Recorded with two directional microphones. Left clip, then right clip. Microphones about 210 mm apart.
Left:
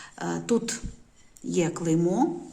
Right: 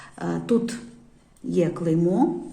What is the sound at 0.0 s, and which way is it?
Speech, 10° left (ahead or behind).